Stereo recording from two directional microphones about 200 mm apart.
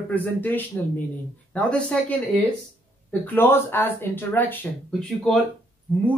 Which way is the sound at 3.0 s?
10° left (ahead or behind).